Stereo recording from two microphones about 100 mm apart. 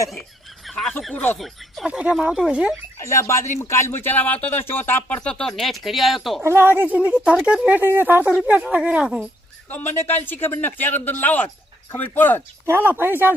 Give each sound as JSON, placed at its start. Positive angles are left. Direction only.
{"t": 0.7, "sound": "a sound", "side_deg": 5}
{"t": 1.1, "sound": "speech", "side_deg": 20}
{"t": 1.4, "sound": "speech", "side_deg": 0}
{"t": 1.9, "sound": "speech", "side_deg": -10}
{"t": 3.0, "sound": "speech", "side_deg": 30}
{"t": 6.4, "sound": "speech", "side_deg": -25}
{"t": 9.6, "sound": "speech", "side_deg": 20}
{"t": 12.6, "sound": "speech", "side_deg": -20}